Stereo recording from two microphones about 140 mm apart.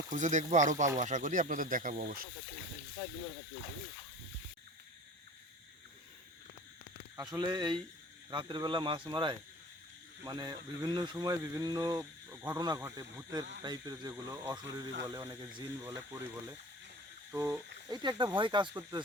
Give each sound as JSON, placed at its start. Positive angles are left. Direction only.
{"t": 0.1, "sound": "speech", "side_deg": -60}
{"t": 7.2, "sound": "speech", "side_deg": -30}
{"t": 18.7, "sound": "speech", "side_deg": -20}